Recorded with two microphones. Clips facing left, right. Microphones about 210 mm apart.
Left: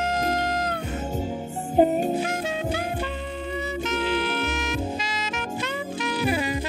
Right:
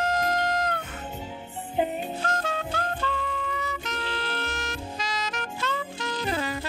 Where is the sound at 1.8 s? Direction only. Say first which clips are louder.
Left 8 dB; 40° left (ahead or behind).